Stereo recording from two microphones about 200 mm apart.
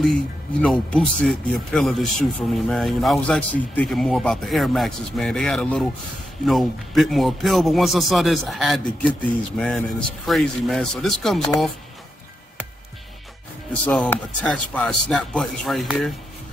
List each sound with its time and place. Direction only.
0.0 s speech: centre (ahead or behind)
13.8 s speech: 10° left (ahead or behind)